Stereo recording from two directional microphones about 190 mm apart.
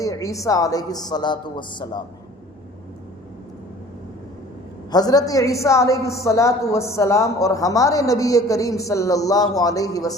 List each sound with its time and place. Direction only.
0.0 s a woman's voice: 15° left (ahead or behind)
4.9 s a woman's voice: 20° left (ahead or behind)